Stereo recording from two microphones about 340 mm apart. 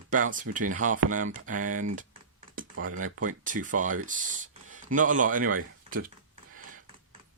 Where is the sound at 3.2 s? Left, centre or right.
Right.